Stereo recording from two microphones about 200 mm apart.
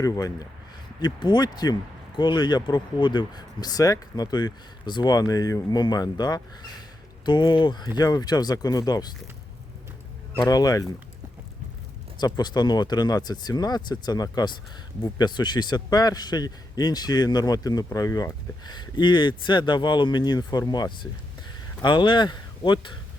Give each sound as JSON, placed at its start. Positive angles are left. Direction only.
{"t": 0.0, "sound": "a man's voice", "side_deg": 15}
{"t": 10.4, "sound": "a man's voice", "side_deg": 20}
{"t": 12.2, "sound": "a man's voice", "side_deg": 20}